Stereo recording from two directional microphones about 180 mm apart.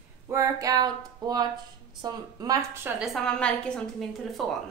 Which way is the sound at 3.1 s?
5° left (ahead or behind).